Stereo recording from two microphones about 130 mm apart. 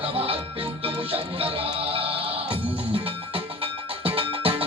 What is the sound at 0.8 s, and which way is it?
Music, 45° right (ahead or behind).